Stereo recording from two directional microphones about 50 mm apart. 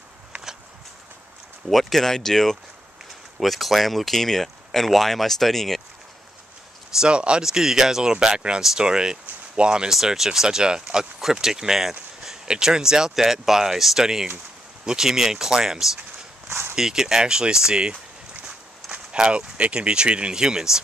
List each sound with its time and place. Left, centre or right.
1.7 s speech: centre
7.0 s speech: centre
7.4 s speech: centre
9.9 s speech: centre
16.4 s walk: right
16.7 s speech: centre